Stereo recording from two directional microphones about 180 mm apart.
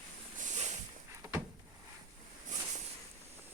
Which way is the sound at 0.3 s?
40° right (ahead or behind).